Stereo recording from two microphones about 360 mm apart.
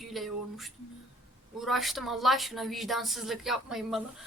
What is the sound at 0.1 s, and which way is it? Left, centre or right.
A woman's voice, centre.